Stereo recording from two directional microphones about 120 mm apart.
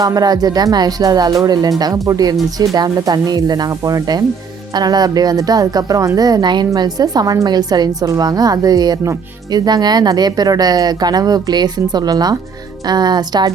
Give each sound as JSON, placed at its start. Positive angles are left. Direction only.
{"t": 0.0, "sound": "a woman's voice", "side_deg": -30}